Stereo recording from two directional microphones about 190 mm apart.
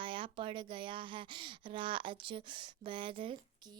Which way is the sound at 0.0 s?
25° right (ahead or behind).